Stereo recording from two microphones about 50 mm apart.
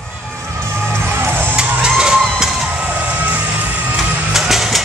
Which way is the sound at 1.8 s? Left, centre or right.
Centre.